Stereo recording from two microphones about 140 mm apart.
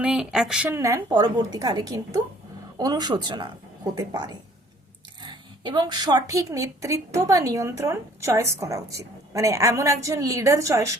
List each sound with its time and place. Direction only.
0.0 s speech: 5° right (ahead or behind)
0.8 s a woman's voice: 20° right (ahead or behind)